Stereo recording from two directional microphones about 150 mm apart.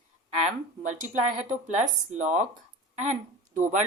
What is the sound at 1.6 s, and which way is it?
Speech, 55° right (ahead or behind).